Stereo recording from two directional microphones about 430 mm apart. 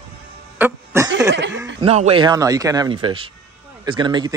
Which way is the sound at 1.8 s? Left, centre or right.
Centre.